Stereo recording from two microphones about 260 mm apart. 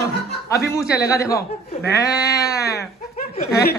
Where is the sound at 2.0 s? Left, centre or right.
Left.